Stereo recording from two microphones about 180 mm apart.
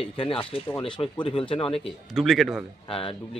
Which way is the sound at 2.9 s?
30° left (ahead or behind).